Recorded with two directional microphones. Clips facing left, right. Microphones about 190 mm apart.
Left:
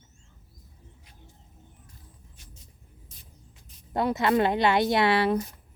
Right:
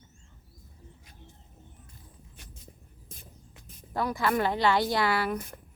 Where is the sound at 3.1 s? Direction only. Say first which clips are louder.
Right 4 dB; 50° right (ahead or behind).